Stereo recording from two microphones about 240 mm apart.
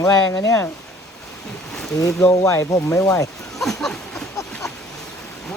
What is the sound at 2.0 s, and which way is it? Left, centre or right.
Speech, centre.